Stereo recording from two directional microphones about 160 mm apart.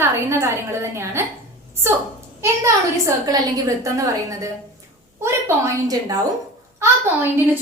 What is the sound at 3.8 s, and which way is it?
A woman's voice, 20° right (ahead or behind).